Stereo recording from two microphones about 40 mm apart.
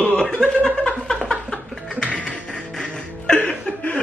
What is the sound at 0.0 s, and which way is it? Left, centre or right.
Chuckle, left.